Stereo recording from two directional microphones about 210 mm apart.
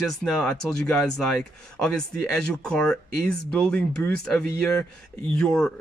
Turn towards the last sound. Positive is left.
turn(degrees=5)  # may be behind; listen again after turning